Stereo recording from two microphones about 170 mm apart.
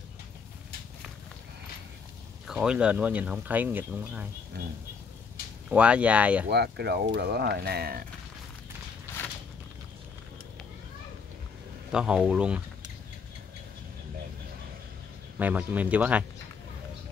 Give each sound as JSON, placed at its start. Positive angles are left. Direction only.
{"t": 2.4, "sound": "speech", "side_deg": -5}
{"t": 5.7, "sound": "speech", "side_deg": -5}
{"t": 6.5, "sound": "speech", "side_deg": -75}
{"t": 9.1, "sound": "walk", "side_deg": 15}
{"t": 11.9, "sound": "speech", "side_deg": -5}
{"t": 15.3, "sound": "speech", "side_deg": -10}